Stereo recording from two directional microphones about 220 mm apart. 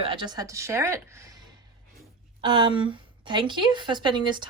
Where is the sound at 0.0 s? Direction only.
20° right (ahead or behind).